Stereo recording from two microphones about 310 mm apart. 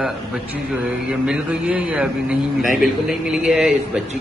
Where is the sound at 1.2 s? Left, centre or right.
Centre.